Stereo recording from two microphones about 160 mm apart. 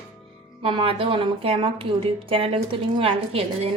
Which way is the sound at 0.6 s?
30° right (ahead or behind).